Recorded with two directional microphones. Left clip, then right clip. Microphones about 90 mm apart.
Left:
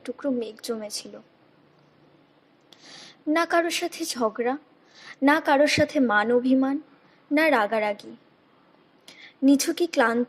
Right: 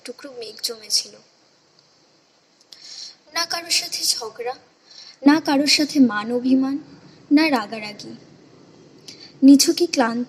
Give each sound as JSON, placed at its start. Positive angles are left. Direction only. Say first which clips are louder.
{"t": 0.0, "sound": "a woman's voice", "louder": "left 5 dB", "side_deg": 30}
{"t": 2.8, "sound": "a woman's voice", "louder": "left 6 dB", "side_deg": 40}
{"t": 9.0, "sound": "a woman's voice", "louder": "right 8 dB", "side_deg": 40}